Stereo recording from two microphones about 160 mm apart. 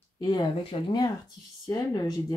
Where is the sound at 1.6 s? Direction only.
25° left (ahead or behind).